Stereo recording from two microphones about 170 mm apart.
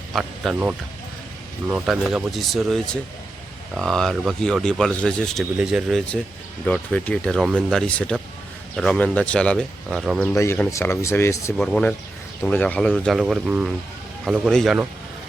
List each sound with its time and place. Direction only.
0.1 s speech: centre (ahead or behind)
10.3 s speech: 15° left (ahead or behind)
11.5 s speech: centre (ahead or behind)